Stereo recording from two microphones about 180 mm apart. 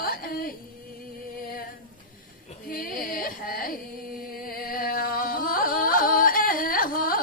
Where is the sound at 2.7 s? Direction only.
50° left (ahead or behind).